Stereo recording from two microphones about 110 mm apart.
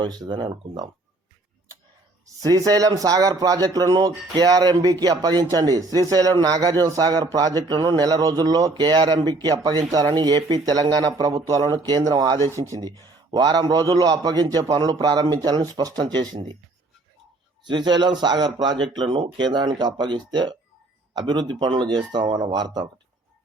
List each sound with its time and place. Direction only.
0.0 s speech: 40° right (ahead or behind)
2.2 s a man's voice: 30° right (ahead or behind)
17.7 s a man's voice: 45° right (ahead or behind)